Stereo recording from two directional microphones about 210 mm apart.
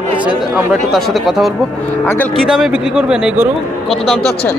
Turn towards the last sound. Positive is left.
turn(degrees=-5)  # may be behind; listen again after turning